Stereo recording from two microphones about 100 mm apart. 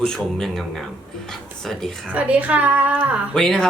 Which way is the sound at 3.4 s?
5° left (ahead or behind).